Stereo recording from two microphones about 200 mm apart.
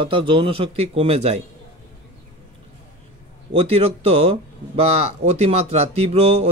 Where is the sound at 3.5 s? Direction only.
30° right (ahead or behind).